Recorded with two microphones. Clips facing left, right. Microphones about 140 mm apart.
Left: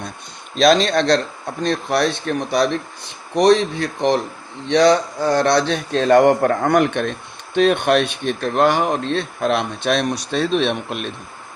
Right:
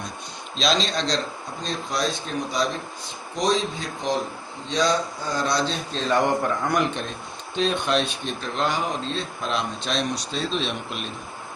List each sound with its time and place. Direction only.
0.5 s speech: 55° left (ahead or behind)